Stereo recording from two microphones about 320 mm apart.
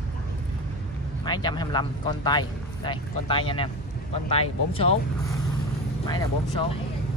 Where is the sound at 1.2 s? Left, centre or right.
Centre.